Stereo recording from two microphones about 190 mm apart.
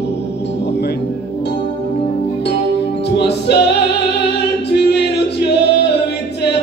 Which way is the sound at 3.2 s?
60° left (ahead or behind).